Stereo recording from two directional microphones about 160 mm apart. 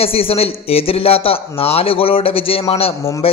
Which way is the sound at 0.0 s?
35° left (ahead or behind).